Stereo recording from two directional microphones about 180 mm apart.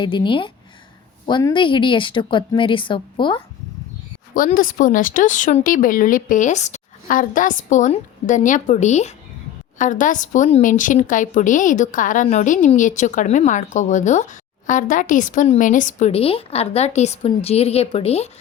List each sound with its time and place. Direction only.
0.0 s a woman's voice: 25° left (ahead or behind)
4.4 s a woman's voice: 50° left (ahead or behind); by 18.3 s 35° left (ahead or behind)